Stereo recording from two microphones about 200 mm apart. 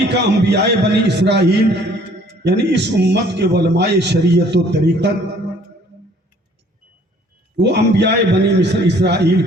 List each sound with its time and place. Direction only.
0.1 s a man's voice: 60° right (ahead or behind)
7.5 s a man's voice: 55° right (ahead or behind)